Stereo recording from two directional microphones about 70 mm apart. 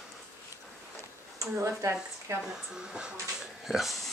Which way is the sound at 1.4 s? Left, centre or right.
Right.